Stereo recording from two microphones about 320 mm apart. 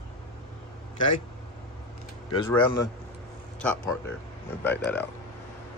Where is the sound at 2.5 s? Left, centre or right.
Centre.